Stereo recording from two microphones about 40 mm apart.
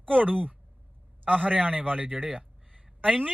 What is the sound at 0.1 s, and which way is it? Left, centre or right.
Speech, right.